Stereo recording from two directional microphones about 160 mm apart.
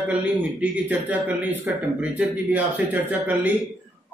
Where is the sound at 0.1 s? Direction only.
10° right (ahead or behind).